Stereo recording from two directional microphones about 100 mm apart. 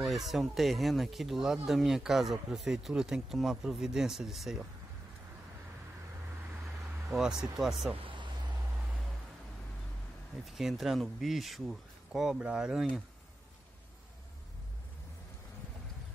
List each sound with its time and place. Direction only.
0.0 s speech: centre (ahead or behind)
7.1 s speech: 5° right (ahead or behind)
7.9 s a sound: 60° right (ahead or behind)
10.4 s speech: centre (ahead or behind)